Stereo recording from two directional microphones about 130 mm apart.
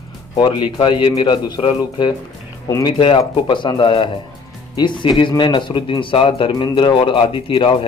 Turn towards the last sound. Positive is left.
turn(degrees=40)  # may be behind; listen again after turning